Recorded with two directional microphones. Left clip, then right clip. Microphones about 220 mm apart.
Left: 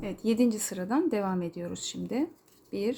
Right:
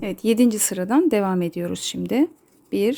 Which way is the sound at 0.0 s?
45° right (ahead or behind).